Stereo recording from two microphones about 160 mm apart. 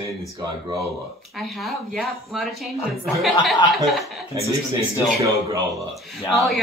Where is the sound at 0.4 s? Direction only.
25° right (ahead or behind).